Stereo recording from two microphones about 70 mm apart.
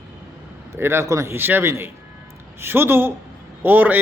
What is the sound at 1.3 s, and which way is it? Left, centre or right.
A man's voice, right.